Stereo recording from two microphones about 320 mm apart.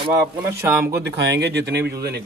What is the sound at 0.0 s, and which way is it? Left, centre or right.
Speech, centre.